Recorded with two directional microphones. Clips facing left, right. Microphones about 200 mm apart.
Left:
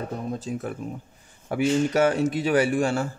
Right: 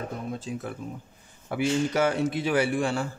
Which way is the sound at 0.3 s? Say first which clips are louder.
Left 3 dB; 45° left (ahead or behind).